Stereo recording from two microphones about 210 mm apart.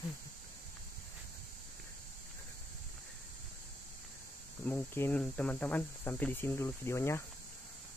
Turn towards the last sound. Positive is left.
turn(degrees=10)  # may be behind; listen again after turning